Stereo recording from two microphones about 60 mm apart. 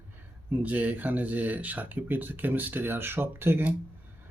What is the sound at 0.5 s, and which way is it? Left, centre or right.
Speech, right.